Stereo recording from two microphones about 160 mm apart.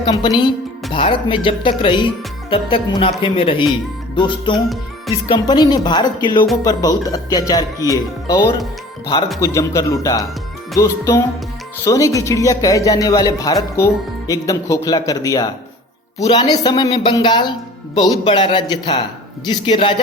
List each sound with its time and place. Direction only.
0.1 s a man's voice: 25° left (ahead or behind)
4.5 s speech: centre (ahead or behind)
5.3 s a man's voice: 25° left (ahead or behind)